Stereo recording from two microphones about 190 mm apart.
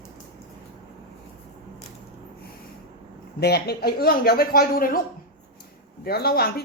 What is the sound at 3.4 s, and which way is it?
A woman's voice, 60° left (ahead or behind).